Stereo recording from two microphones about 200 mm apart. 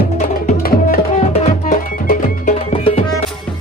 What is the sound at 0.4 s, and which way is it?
Tabla, 40° left (ahead or behind).